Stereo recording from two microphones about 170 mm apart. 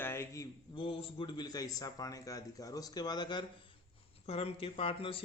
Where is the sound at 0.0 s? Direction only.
15° left (ahead or behind).